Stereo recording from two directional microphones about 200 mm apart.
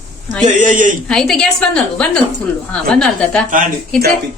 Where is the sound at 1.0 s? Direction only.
Centre (ahead or behind).